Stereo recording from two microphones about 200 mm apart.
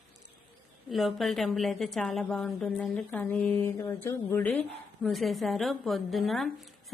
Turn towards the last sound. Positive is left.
turn(degrees=0)  # may be behind; listen again after turning